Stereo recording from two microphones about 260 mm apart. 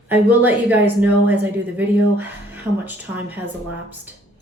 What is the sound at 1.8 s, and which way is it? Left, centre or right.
Speech, centre.